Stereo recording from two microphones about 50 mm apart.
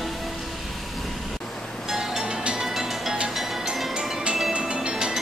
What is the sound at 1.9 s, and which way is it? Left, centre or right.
Music, centre.